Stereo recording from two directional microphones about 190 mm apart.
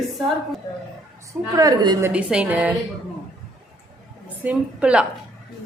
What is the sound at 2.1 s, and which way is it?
Speech, 5° right (ahead or behind).